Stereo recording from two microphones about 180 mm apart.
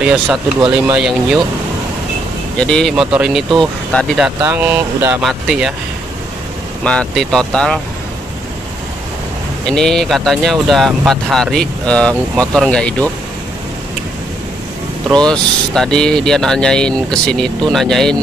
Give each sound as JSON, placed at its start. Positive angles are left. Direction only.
{"t": 0.0, "sound": "speech", "side_deg": -5}
{"t": 0.6, "sound": "speech", "side_deg": -25}
{"t": 0.9, "sound": "speech", "side_deg": -5}
{"t": 2.6, "sound": "speech", "side_deg": 5}
{"t": 6.8, "sound": "speech", "side_deg": 5}
{"t": 9.7, "sound": "speech", "side_deg": 5}
{"t": 15.0, "sound": "speech", "side_deg": 5}